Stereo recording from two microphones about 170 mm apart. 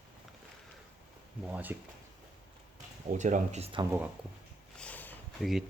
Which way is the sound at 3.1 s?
45° right (ahead or behind).